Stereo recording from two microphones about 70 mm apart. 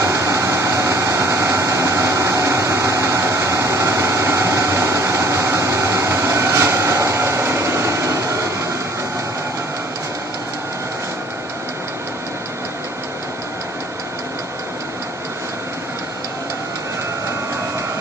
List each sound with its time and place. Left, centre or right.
0.0 s vehicle: right